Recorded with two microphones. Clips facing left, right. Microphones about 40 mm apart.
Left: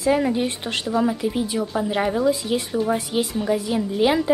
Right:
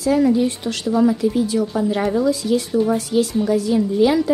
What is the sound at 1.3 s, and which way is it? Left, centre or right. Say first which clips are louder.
A woman's voice: right 4 dB; left.